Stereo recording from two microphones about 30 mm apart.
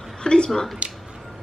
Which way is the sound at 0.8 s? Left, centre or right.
Right.